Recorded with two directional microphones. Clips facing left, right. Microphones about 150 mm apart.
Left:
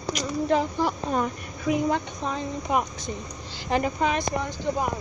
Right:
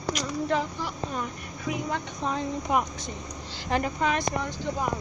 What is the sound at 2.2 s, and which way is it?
Speech, centre (ahead or behind).